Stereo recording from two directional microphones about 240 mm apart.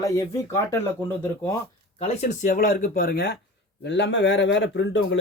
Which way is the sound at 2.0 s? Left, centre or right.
Left.